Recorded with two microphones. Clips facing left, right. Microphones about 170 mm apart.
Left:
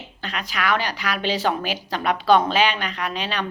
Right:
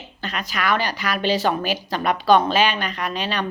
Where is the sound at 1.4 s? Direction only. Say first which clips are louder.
Right 2 dB; 10° right (ahead or behind).